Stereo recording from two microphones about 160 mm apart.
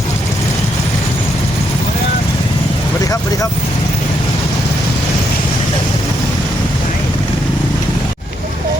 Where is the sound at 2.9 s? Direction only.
20° left (ahead or behind).